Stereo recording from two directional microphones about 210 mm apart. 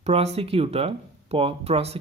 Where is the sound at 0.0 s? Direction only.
30° right (ahead or behind).